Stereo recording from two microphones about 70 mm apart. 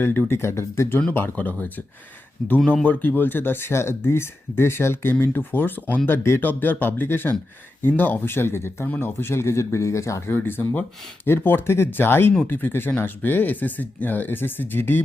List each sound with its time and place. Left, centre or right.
0.0 s speech: left
1.4 s speech: left
2.4 s speech: centre
2.8 s speech: left